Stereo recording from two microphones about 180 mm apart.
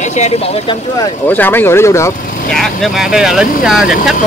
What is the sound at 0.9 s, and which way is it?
Speech, 15° left (ahead or behind).